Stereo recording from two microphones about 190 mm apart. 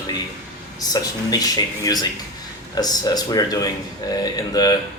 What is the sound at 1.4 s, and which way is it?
Speech, 20° left (ahead or behind).